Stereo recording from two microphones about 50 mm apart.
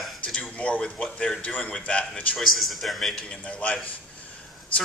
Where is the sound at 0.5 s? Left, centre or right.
Left.